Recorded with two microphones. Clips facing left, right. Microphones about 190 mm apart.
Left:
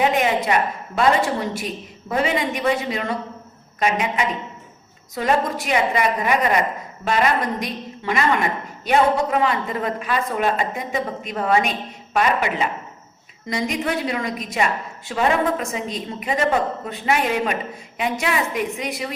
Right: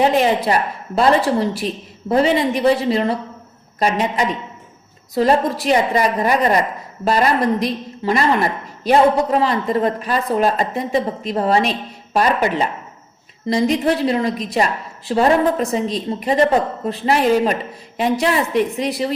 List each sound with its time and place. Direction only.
0.0 s a woman's voice: 35° right (ahead or behind)